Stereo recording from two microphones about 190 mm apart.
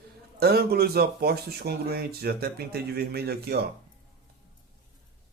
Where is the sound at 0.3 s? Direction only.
55° right (ahead or behind).